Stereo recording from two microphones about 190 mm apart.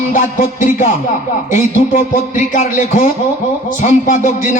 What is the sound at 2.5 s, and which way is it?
A man's voice, 40° left (ahead or behind).